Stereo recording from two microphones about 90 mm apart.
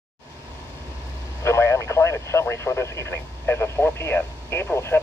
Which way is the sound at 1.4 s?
35° left (ahead or behind).